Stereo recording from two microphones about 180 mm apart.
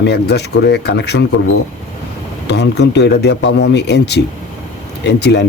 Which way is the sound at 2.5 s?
70° left (ahead or behind).